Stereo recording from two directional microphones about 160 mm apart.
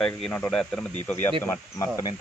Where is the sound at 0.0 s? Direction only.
5° left (ahead or behind).